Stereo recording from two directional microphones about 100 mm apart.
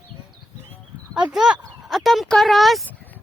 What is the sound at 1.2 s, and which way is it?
Speech, 5° right (ahead or behind).